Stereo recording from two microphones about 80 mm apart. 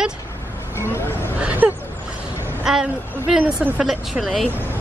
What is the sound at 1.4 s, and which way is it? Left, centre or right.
Speech, right.